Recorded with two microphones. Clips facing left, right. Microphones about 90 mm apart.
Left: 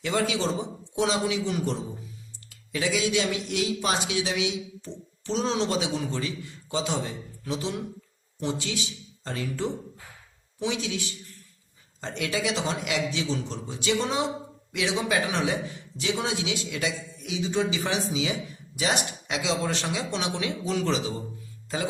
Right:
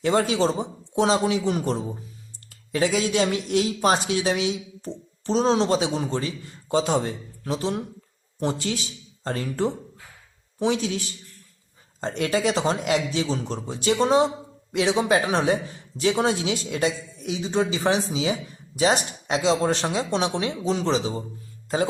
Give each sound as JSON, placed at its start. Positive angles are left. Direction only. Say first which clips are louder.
{"t": 0.0, "sound": "speech", "louder": "right 5 dB", "side_deg": -35}